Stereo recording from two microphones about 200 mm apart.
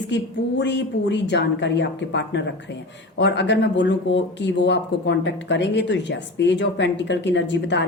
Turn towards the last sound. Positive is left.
turn(degrees=60)  # may be behind; listen again after turning